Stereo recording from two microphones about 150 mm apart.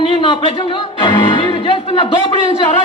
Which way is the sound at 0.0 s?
35° left (ahead or behind).